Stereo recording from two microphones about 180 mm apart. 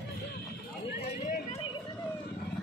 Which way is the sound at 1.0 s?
40° left (ahead or behind).